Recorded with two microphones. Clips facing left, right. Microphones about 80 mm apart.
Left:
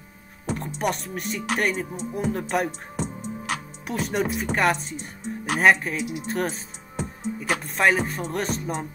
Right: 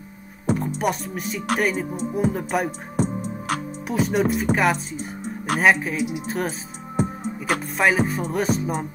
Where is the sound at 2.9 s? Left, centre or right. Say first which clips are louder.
Right 6 dB; right.